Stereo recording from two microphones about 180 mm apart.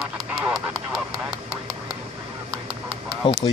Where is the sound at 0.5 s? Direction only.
Centre (ahead or behind).